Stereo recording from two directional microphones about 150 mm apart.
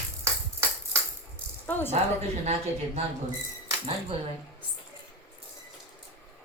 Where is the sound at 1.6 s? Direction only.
10° left (ahead or behind).